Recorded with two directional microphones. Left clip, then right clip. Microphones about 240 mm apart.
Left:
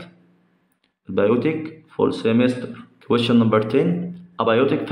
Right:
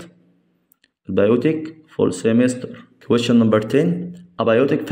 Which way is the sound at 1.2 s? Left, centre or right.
Right.